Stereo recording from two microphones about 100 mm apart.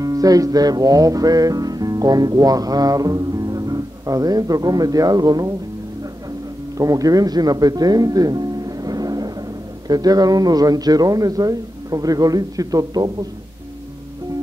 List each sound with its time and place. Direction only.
0.0 s music: 35° right (ahead or behind)
6.8 s speech: 35° right (ahead or behind)